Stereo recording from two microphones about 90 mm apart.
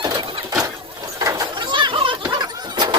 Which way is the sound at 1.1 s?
40° right (ahead or behind).